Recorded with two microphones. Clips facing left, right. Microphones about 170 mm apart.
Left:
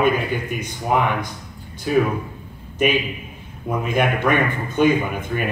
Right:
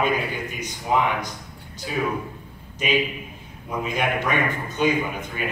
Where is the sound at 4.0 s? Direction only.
55° left (ahead or behind).